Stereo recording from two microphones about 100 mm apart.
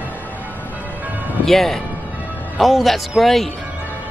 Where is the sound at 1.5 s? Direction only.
5° left (ahead or behind).